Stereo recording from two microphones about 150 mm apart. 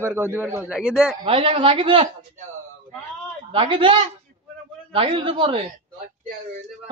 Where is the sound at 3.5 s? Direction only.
35° right (ahead or behind).